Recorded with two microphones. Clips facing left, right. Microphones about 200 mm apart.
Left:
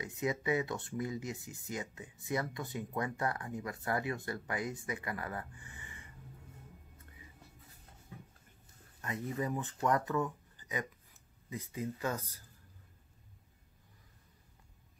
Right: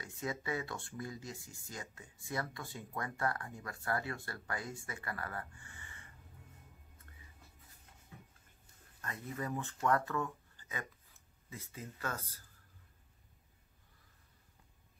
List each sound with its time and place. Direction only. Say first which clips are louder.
0.0 s speech: left 6 dB; 20° left (ahead or behind)
9.0 s speech: left 5 dB; 20° left (ahead or behind)